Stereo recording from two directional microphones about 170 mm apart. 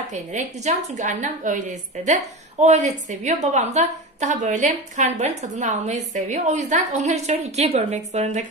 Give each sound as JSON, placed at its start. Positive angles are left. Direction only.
{"t": 0.1, "sound": "a woman's voice", "side_deg": -45}